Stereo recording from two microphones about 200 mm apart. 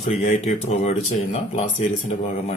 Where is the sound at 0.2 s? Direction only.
35° left (ahead or behind).